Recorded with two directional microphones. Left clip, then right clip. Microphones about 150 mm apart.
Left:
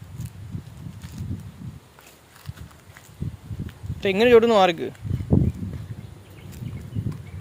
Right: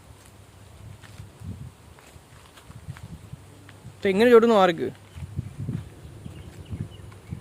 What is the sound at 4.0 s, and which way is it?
Speech, 15° right (ahead or behind).